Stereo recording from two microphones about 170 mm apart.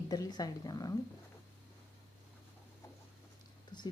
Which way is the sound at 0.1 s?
20° left (ahead or behind).